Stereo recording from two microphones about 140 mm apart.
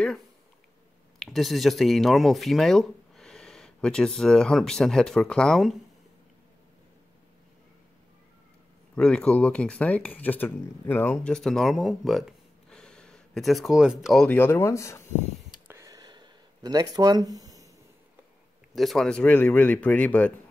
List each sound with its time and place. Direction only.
1.2 s speech: centre (ahead or behind)
8.9 s speech: 5° left (ahead or behind)
14.2 s speech: 15° left (ahead or behind)
15.7 s a sound: 25° right (ahead or behind)
18.8 s speech: centre (ahead or behind)